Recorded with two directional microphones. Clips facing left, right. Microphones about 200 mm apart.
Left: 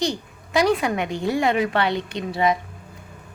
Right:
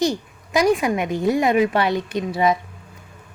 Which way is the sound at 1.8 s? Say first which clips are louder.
Right 2 dB; 20° left (ahead or behind).